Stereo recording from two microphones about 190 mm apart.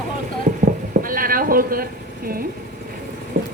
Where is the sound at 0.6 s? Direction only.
45° right (ahead or behind).